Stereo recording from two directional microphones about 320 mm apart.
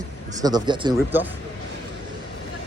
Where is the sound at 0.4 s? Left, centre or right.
Centre.